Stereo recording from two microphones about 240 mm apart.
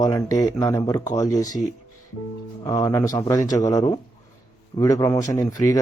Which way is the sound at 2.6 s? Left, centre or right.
Centre.